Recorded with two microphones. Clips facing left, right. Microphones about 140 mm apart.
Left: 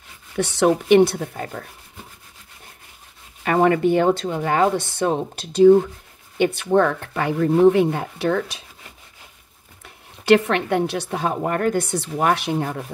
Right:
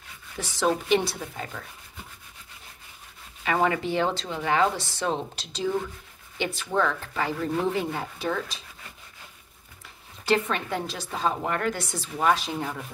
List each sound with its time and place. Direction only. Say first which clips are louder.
0.4 s speech: left 7 dB; 65° left (ahead or behind); by 1.7 s 50° left (ahead or behind)
3.4 s speech: left 8 dB; 50° left (ahead or behind); by 8.5 s 65° left (ahead or behind)
10.2 s a woman's voice: left 9 dB; 70° left (ahead or behind)
11.4 s speech: left 7 dB; 45° left (ahead or behind)